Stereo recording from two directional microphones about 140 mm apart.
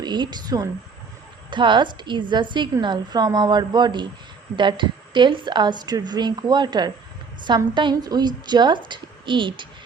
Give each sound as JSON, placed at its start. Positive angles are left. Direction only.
{"t": 0.0, "sound": "a woman's voice", "side_deg": -30}